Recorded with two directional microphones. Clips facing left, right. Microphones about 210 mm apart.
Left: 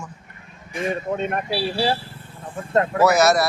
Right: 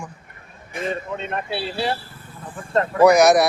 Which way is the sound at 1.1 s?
50° left (ahead or behind).